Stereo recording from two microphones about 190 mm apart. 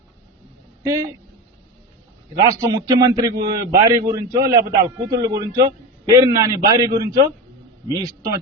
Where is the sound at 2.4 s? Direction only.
15° right (ahead or behind).